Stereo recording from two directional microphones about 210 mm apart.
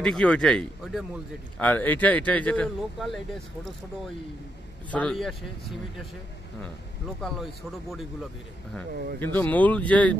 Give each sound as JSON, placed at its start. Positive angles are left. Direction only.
{"t": 0.0, "sound": "a man's voice", "side_deg": 5}
{"t": 4.9, "sound": "speech", "side_deg": 5}
{"t": 7.2, "sound": "speech", "side_deg": 0}
{"t": 8.9, "sound": "speech", "side_deg": -50}
{"t": 9.2, "sound": "a man's voice", "side_deg": 10}